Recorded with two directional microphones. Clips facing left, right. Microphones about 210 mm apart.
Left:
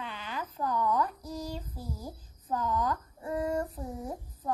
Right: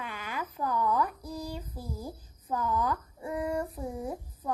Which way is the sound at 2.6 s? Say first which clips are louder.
Right 1 dB; 10° right (ahead or behind).